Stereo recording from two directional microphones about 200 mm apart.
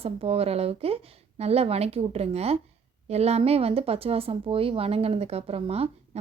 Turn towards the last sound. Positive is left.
turn(degrees=-30)  # may be behind; listen again after turning